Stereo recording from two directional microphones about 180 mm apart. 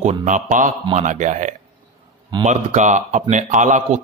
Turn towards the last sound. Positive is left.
turn(degrees=-45)  # may be behind; listen again after turning